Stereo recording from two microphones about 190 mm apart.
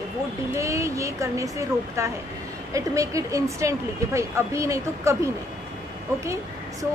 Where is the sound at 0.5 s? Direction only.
15° right (ahead or behind).